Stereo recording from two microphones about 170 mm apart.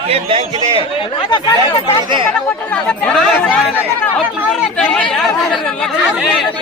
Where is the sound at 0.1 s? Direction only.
35° right (ahead or behind).